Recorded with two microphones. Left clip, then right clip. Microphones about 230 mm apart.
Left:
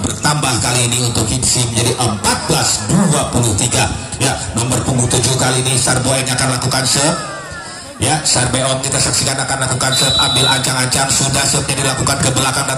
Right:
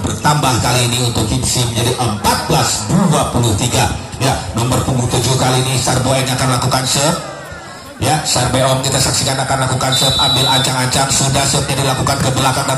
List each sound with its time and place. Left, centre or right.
0.2 s music: left
5.1 s a sound: left
8.0 s music: left